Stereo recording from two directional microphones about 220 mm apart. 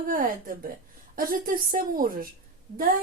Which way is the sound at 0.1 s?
40° right (ahead or behind).